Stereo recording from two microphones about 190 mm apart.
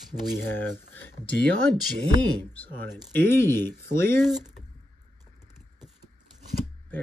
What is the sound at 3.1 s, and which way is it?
Speech, 15° left (ahead or behind).